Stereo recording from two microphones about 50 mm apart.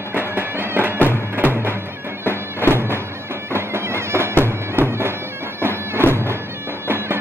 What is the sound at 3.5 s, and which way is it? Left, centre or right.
Bagpipes, right.